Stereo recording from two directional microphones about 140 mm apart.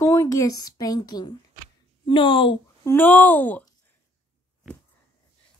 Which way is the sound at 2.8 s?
15° left (ahead or behind).